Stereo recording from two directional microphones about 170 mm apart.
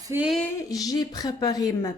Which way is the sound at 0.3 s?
5° left (ahead or behind).